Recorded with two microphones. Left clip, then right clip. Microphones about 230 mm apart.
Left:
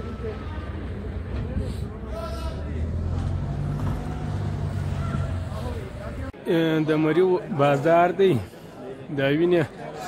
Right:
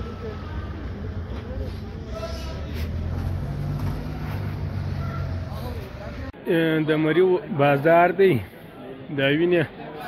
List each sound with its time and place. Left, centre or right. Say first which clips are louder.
6.4 s speech: right 1 dB; centre